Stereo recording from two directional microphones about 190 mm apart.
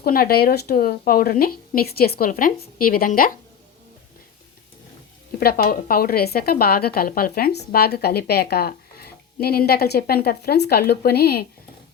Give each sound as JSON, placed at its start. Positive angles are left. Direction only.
{"t": 0.0, "sound": "a woman's voice", "side_deg": 55}
{"t": 5.4, "sound": "speech", "side_deg": 55}